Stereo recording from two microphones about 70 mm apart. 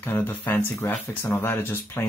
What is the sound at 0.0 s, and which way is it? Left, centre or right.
Speech, left.